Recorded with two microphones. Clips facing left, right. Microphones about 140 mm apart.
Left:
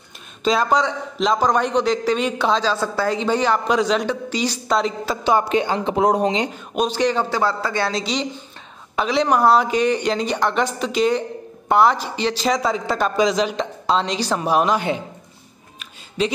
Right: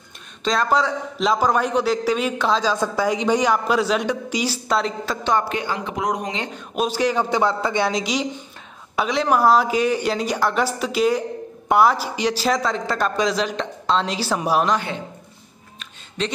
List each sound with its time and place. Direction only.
0.4 s a man's voice: centre (ahead or behind)
5.4 s speech: 25° left (ahead or behind)
6.5 s a woman's voice: 5° right (ahead or behind)
7.2 s a woman's voice: 20° right (ahead or behind)
12.4 s a man's voice: centre (ahead or behind)
15.8 s a sound: 5° left (ahead or behind)